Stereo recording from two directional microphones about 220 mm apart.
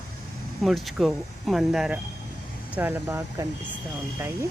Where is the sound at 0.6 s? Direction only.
Centre (ahead or behind).